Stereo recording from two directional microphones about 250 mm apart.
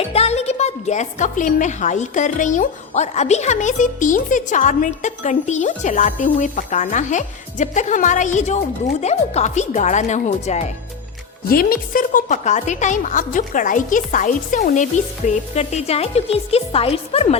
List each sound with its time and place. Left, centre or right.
0.0 s a woman's voice: left